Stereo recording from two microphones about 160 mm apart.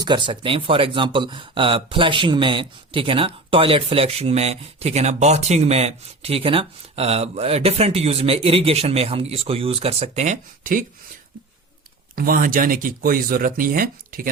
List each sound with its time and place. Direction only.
0.0 s speech: 30° right (ahead or behind); by 10.8 s 60° right (ahead or behind)
12.1 s speech: 65° right (ahead or behind)